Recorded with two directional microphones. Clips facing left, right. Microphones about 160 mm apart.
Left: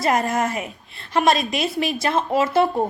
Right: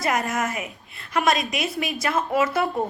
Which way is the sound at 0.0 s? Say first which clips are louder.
Left 4 dB; 30° left (ahead or behind).